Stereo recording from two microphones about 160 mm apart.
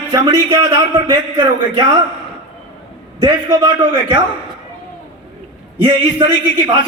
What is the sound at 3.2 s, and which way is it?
A man's voice, 30° right (ahead or behind).